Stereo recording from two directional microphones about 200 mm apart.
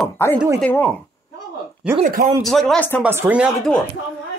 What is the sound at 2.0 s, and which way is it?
Speech, 45° right (ahead or behind).